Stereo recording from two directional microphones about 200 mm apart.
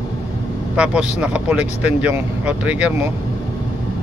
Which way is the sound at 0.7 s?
5° right (ahead or behind).